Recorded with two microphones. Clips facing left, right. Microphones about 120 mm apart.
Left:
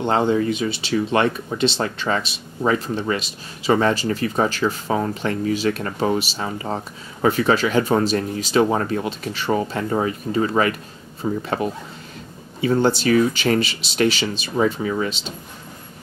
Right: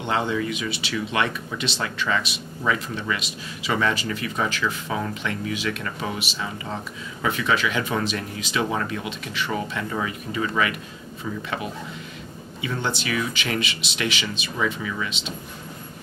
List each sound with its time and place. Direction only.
0.0 s speech: 35° left (ahead or behind)